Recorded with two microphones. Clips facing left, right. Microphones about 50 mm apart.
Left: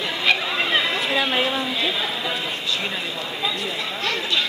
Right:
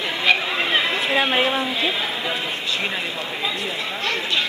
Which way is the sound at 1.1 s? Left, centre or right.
Right.